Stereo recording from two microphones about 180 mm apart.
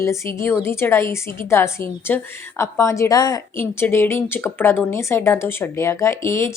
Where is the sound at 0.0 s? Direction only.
15° left (ahead or behind).